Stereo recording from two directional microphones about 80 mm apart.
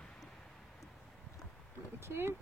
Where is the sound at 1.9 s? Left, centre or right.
Right.